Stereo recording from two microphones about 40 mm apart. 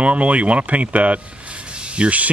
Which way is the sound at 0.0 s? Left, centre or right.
Right.